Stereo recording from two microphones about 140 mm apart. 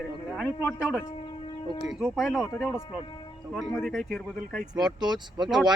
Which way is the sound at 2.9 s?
35° left (ahead or behind).